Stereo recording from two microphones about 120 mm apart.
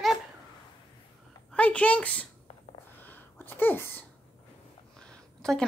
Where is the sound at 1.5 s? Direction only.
10° left (ahead or behind).